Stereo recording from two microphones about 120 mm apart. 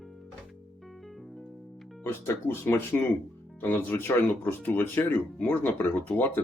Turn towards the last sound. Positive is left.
turn(degrees=15)  # may be behind; listen again after turning